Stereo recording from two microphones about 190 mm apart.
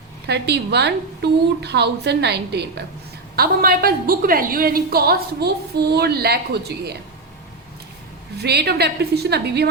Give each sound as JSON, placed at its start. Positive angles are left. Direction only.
{"t": 0.3, "sound": "a woman's voice", "side_deg": -60}
{"t": 8.4, "sound": "a woman's voice", "side_deg": -60}